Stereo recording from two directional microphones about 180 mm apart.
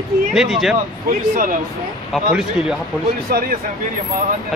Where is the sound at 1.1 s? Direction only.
50° right (ahead or behind).